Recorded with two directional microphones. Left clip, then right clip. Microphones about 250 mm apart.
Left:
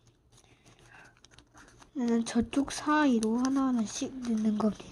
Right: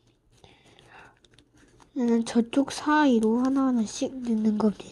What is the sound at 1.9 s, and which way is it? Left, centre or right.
Speech, centre.